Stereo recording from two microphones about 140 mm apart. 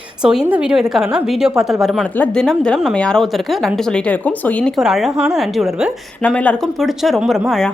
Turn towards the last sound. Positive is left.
turn(degrees=0)  # may be behind; listen again after turning